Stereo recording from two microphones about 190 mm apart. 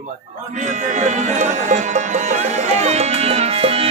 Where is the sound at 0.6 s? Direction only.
40° right (ahead or behind).